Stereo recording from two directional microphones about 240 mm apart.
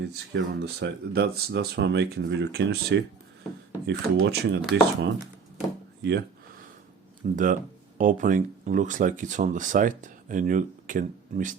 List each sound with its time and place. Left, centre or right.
0.0 s speech: right
5.2 s a sound: centre
6.0 s speech: right
7.2 s speech: right